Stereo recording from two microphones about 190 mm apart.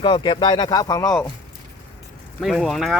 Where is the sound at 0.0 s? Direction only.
25° left (ahead or behind).